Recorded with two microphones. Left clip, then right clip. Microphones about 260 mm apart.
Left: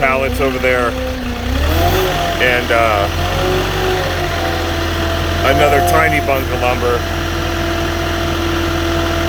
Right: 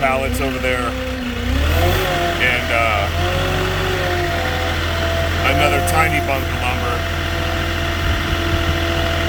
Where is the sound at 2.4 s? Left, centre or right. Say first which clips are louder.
Left 6 dB; centre.